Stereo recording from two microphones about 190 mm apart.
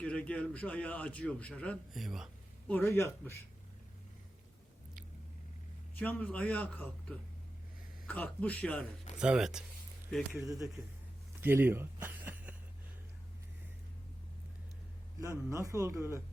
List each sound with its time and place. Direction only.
0.0 s a man's voice: 5° left (ahead or behind)
2.7 s a man's voice: 15° left (ahead or behind)
6.0 s a man's voice: 10° left (ahead or behind)
8.0 s a man's voice: 10° left (ahead or behind)
9.1 s speech: 5° right (ahead or behind)
10.3 s speech: 15° right (ahead or behind)
11.3 s a sound: 10° right (ahead or behind)
15.4 s speech: 15° right (ahead or behind)